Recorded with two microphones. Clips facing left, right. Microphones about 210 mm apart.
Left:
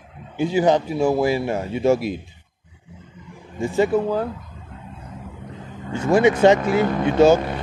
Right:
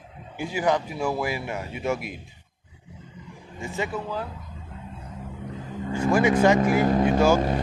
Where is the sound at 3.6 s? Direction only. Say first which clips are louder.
Left 11 dB; 35° left (ahead or behind).